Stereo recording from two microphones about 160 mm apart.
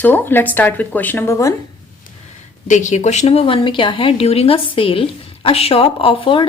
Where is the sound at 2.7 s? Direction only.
50° left (ahead or behind); by 6.4 s 35° left (ahead or behind).